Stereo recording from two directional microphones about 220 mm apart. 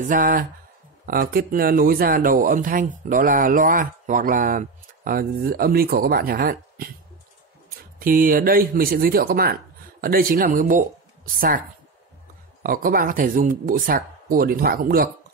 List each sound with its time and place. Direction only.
0.0 s speech: 35° right (ahead or behind)
8.0 s speech: 40° right (ahead or behind)
12.6 s speech: 40° right (ahead or behind)